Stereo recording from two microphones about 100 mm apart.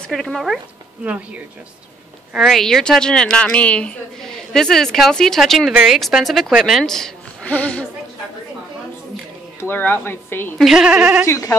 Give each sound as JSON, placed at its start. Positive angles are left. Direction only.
{"t": 0.1, "sound": "a woman's voice", "side_deg": 5}
{"t": 1.0, "sound": "speech", "side_deg": -15}
{"t": 2.3, "sound": "a woman's voice", "side_deg": 0}
{"t": 9.6, "sound": "speech", "side_deg": 20}
{"t": 10.6, "sound": "speech", "side_deg": -5}
{"t": 11.2, "sound": "speech", "side_deg": 35}